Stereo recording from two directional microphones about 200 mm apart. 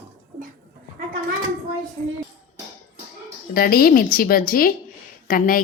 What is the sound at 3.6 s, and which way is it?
A woman's voice, 50° left (ahead or behind).